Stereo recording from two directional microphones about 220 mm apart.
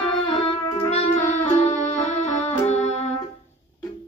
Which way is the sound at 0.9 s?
30° left (ahead or behind).